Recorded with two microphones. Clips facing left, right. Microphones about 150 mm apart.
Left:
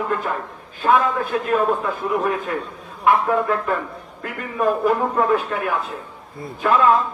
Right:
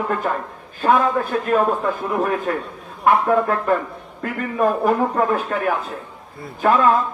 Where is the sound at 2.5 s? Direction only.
40° right (ahead or behind).